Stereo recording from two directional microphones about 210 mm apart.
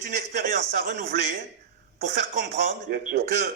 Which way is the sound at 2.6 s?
45° right (ahead or behind).